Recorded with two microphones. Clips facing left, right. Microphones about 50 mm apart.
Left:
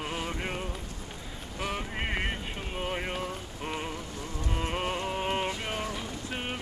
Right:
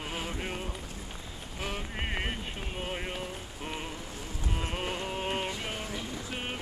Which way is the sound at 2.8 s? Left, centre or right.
Centre.